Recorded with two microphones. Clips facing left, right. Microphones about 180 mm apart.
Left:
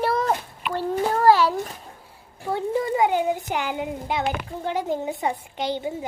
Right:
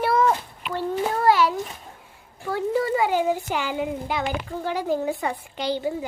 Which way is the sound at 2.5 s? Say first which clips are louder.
Right 1 dB; 15° left (ahead or behind).